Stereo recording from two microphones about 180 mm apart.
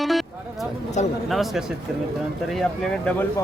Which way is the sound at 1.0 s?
40° left (ahead or behind).